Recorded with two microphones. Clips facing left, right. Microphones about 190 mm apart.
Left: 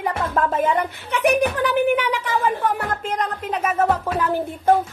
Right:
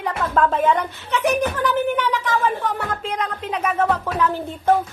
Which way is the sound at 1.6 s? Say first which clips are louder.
Left 2 dB; 15° left (ahead or behind).